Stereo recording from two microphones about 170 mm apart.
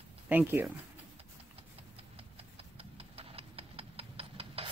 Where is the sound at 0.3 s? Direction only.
10° right (ahead or behind).